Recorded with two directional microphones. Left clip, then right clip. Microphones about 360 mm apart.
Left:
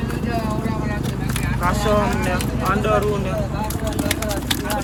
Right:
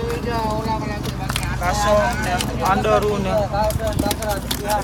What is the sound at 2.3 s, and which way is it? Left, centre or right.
Speech, centre.